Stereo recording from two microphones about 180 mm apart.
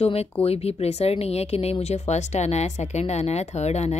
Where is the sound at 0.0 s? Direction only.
35° left (ahead or behind).